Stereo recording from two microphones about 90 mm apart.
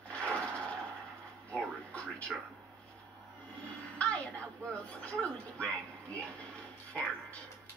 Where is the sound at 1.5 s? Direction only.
15° left (ahead or behind).